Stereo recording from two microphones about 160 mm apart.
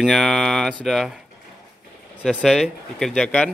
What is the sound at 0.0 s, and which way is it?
Speech, centre (ahead or behind).